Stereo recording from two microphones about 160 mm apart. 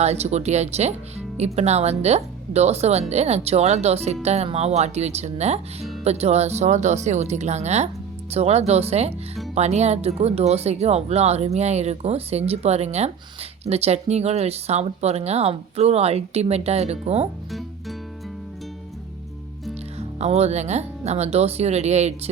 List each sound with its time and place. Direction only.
0.0 s speech: 40° right (ahead or behind)
17.5 s music: centre (ahead or behind)
20.0 s speech: 40° right (ahead or behind)